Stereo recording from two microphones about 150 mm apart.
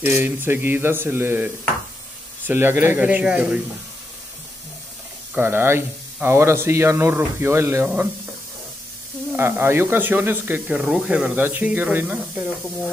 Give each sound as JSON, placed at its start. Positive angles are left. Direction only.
{"t": 0.0, "sound": "speech", "side_deg": -15}
{"t": 5.3, "sound": "speech", "side_deg": -15}
{"t": 9.4, "sound": "speech", "side_deg": -15}